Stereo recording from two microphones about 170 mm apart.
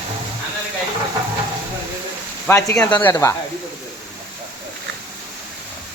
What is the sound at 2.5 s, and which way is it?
Speech, 10° left (ahead or behind).